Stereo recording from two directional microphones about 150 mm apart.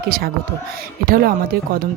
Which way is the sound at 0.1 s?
80° right.